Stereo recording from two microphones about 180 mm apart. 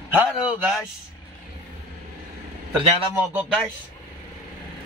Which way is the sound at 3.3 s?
Centre (ahead or behind).